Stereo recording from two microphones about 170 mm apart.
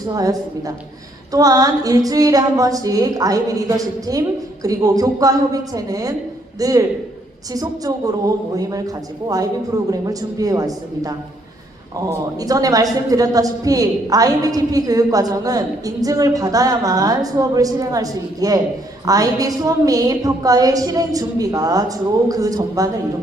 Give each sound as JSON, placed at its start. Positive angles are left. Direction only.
{"t": 0.1, "sound": "a woman's voice", "side_deg": -20}
{"t": 9.2, "sound": "a woman's voice", "side_deg": -20}